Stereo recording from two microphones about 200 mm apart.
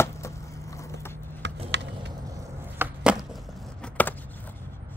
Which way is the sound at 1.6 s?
60° right (ahead or behind).